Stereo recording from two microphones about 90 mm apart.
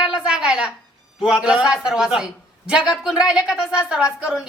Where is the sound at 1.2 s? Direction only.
10° right (ahead or behind).